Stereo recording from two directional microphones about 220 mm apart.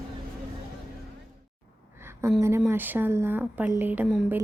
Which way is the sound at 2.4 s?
10° right (ahead or behind).